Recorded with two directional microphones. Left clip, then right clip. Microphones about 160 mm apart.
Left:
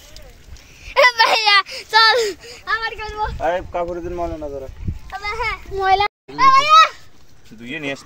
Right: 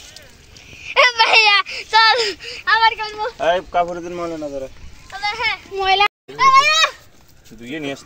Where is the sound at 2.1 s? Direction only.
90° left.